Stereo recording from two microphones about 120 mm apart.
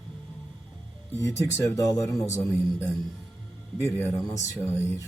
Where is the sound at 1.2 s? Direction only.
25° left (ahead or behind).